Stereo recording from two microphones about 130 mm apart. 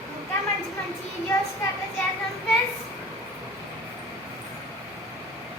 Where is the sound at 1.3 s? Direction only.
25° left (ahead or behind).